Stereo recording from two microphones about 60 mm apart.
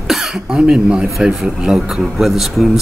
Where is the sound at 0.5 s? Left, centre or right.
Centre.